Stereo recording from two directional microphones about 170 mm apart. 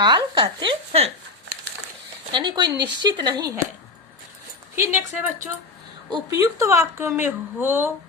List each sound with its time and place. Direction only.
0.0 s speech: 25° right (ahead or behind)
2.3 s speech: 25° right (ahead or behind)
4.7 s a woman's voice: 15° right (ahead or behind)